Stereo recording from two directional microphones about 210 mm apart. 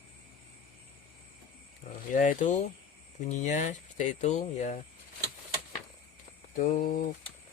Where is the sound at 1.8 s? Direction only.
45° left (ahead or behind).